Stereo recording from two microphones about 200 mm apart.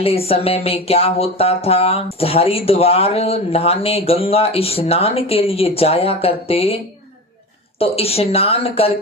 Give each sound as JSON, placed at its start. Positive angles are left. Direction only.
{"t": 0.0, "sound": "speech", "side_deg": 30}
{"t": 7.8, "sound": "speech", "side_deg": 30}